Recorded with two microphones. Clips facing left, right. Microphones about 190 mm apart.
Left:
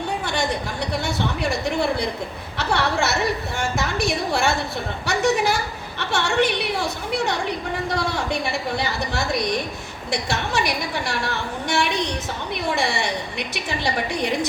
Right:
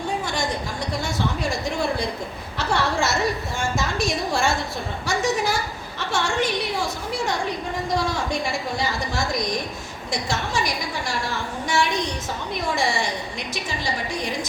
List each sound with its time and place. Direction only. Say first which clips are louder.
1.0 s a woman's voice: even; 65° left (ahead or behind)